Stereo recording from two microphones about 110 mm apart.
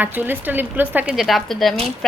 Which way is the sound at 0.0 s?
15° right (ahead or behind).